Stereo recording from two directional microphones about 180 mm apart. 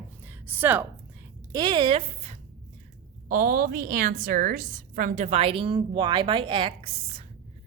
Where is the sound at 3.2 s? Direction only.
50° right (ahead or behind).